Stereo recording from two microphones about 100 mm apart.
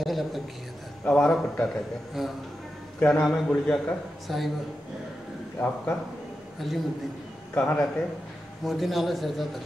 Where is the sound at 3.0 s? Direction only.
10° left (ahead or behind).